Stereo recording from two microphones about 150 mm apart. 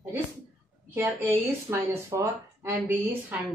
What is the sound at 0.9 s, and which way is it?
A woman's voice, 15° right (ahead or behind).